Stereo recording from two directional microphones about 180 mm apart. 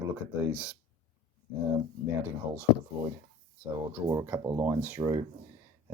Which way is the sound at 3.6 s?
10° right (ahead or behind).